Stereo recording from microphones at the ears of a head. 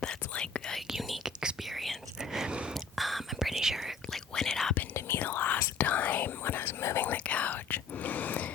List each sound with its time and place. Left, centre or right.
3.0 s whispering: centre
4.4 s whispering: left